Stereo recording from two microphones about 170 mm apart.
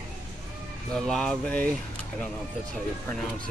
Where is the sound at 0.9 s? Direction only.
5° left (ahead or behind).